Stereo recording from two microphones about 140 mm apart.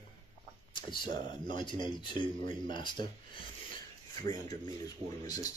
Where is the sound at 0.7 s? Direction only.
35° left (ahead or behind).